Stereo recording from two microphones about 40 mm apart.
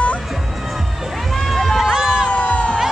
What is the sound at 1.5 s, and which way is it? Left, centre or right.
Run, centre.